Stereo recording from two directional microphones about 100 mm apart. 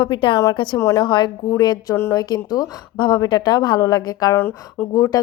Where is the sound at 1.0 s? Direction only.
50° left (ahead or behind).